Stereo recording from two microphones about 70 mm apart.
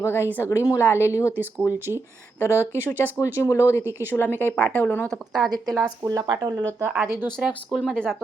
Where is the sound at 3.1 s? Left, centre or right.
Left.